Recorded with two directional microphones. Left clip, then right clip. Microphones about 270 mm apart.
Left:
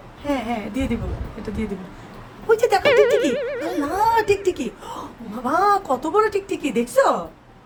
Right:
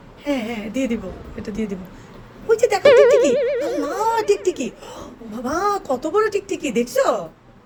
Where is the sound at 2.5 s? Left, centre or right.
Centre.